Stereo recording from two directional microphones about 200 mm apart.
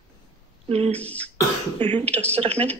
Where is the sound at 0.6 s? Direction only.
30° right (ahead or behind).